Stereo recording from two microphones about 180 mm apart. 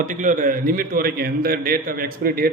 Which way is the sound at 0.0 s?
45° right (ahead or behind).